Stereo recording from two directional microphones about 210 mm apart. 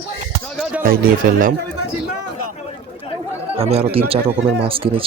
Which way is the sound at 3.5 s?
30° right (ahead or behind).